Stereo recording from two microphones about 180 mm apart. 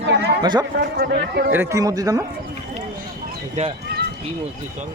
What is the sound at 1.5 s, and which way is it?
Speech, 15° right (ahead or behind).